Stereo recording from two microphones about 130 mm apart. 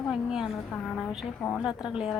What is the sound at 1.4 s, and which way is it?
Speech, 5° left (ahead or behind).